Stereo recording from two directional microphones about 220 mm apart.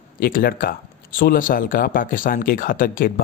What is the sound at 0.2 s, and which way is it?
Speech, 40° left (ahead or behind).